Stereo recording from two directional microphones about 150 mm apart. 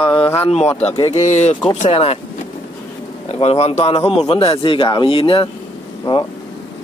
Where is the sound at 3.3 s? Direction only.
40° left (ahead or behind).